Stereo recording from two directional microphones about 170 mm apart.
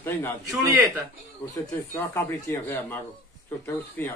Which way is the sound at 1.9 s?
15° left (ahead or behind).